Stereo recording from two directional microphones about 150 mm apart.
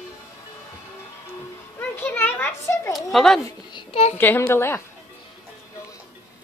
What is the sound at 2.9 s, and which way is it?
Speech, centre (ahead or behind).